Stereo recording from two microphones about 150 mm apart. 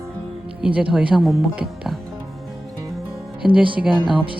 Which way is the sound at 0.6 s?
10° right (ahead or behind).